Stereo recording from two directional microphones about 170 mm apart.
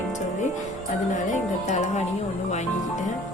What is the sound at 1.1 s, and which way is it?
Speech, 45° left (ahead or behind).